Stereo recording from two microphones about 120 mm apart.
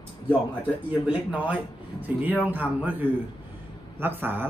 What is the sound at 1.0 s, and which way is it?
Speech, 10° right (ahead or behind).